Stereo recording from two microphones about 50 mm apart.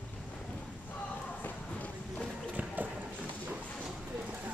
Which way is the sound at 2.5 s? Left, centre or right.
Right.